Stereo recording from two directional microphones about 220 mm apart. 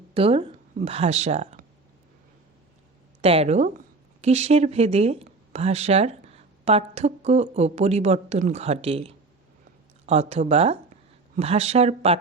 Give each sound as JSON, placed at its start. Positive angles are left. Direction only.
{"t": 0.1, "sound": "speech", "side_deg": -25}
{"t": 3.2, "sound": "speech", "side_deg": -25}